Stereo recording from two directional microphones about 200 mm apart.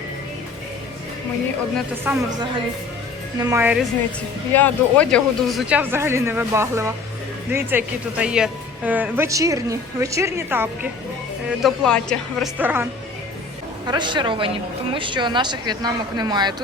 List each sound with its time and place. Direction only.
2.1 s a woman's voice: 10° right (ahead or behind)
3.3 s a woman's voice: 15° right (ahead or behind)
4.5 s a woman's voice: 5° left (ahead or behind); by 10.7 s 10° right (ahead or behind)
11.4 s a woman's voice: centre (ahead or behind)
12.5 s a woman's voice: 10° right (ahead or behind)
13.8 s speech: 20° right (ahead or behind)